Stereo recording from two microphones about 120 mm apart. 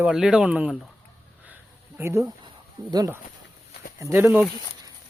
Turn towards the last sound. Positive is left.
turn(degrees=-15)  # may be behind; listen again after turning